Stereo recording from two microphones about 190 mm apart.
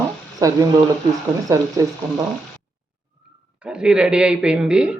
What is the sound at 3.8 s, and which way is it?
Speech, 5° right (ahead or behind).